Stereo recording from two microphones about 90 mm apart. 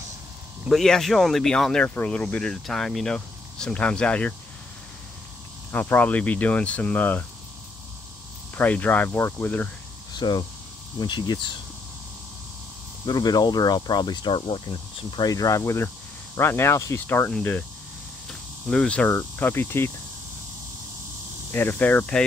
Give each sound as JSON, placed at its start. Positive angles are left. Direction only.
{"t": 0.7, "sound": "speech", "side_deg": 5}
{"t": 5.7, "sound": "speech", "side_deg": 20}
{"t": 8.5, "sound": "speech", "side_deg": 20}
{"t": 10.1, "sound": "speech", "side_deg": 55}
{"t": 13.0, "sound": "speech", "side_deg": 50}
{"t": 15.2, "sound": "speech", "side_deg": 40}
{"t": 18.7, "sound": "speech", "side_deg": 10}
{"t": 21.5, "sound": "speech", "side_deg": 25}